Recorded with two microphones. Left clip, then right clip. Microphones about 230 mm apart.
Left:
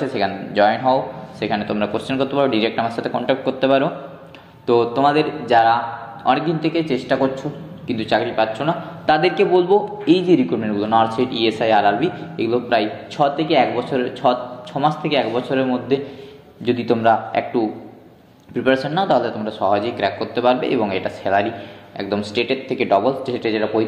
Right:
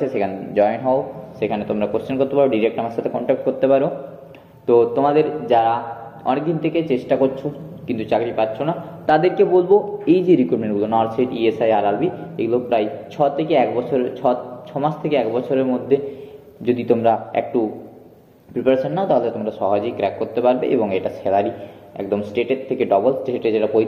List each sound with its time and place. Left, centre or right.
0.0 s a man's voice: centre
18.5 s a man's voice: left
22.4 s a man's voice: left